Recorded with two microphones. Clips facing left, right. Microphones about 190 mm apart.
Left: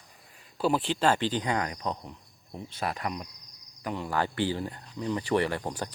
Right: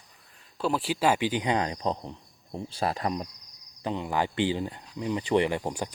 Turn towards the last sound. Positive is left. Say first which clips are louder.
# right 2 dB
turn(degrees=-15)  # may be behind; listen again after turning